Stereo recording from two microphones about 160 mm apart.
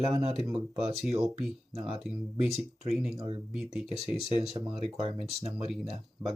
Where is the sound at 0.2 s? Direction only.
40° right (ahead or behind).